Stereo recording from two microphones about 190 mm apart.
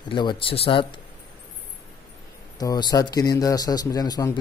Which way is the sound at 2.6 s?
20° left (ahead or behind).